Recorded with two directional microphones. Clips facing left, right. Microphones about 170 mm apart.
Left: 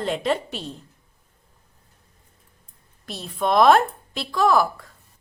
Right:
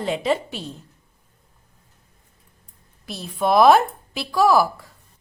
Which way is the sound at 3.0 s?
5° right (ahead or behind).